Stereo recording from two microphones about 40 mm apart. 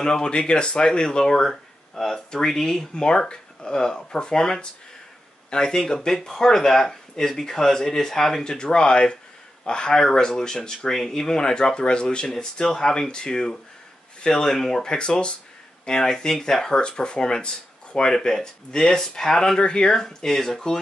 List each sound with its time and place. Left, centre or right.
0.0 s speech: left
8.5 s speech: left
12.4 s speech: centre